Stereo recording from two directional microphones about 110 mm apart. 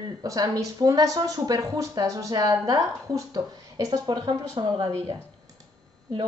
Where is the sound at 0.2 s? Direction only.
35° right (ahead or behind).